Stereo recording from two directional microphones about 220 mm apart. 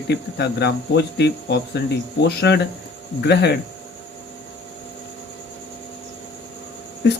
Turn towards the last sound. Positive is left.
turn(degrees=50)  # may be behind; listen again after turning